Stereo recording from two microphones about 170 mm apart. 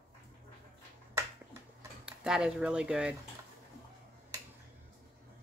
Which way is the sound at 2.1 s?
5° right (ahead or behind).